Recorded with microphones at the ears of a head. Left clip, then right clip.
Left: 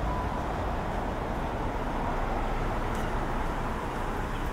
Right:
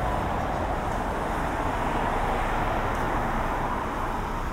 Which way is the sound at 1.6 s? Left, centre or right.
Right.